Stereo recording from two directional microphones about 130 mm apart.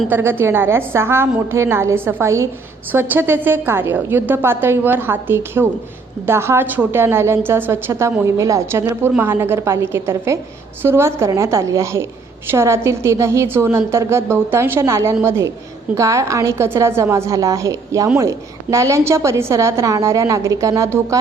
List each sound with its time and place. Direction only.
0.1 s a woman's voice: 15° right (ahead or behind)